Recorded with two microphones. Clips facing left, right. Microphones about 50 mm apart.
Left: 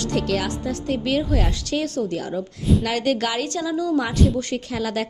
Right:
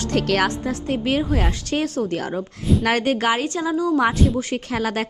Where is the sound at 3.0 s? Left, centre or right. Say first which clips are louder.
Right 2 dB; right.